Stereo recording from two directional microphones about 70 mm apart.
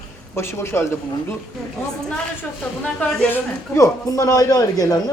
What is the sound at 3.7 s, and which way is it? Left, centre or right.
Speech, left.